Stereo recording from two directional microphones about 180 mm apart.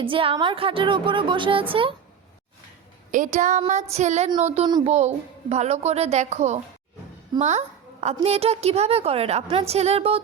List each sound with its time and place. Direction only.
0.0 s speech: 30° right (ahead or behind)
3.1 s a woman's voice: 45° right (ahead or behind)